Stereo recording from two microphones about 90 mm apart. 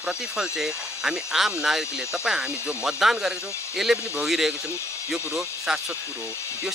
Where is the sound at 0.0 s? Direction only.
5° right (ahead or behind).